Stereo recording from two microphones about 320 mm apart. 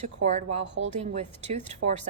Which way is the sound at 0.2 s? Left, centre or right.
Right.